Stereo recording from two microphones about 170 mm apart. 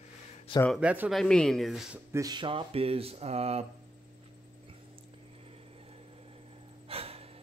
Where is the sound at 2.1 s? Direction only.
20° right (ahead or behind); by 3.7 s 40° right (ahead or behind).